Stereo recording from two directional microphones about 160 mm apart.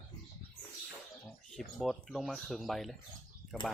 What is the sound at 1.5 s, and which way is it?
Speech, centre (ahead or behind).